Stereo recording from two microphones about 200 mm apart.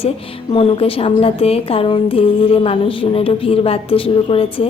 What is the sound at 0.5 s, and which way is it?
Speech, 30° left (ahead or behind).